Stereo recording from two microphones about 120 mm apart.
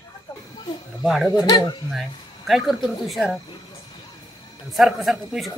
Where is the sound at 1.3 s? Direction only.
35° left (ahead or behind).